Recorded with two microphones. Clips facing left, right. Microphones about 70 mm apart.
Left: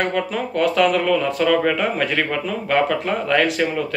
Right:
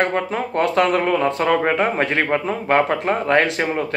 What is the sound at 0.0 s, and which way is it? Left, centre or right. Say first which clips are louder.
Speech: right 1 dB; right.